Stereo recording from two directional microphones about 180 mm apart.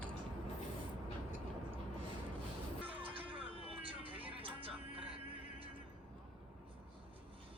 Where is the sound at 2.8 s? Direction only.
30° right (ahead or behind).